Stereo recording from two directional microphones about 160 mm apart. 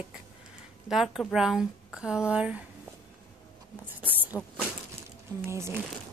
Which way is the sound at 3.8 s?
10° right (ahead or behind).